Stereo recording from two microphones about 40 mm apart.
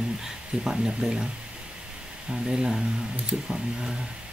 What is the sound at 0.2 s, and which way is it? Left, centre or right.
Speech, centre.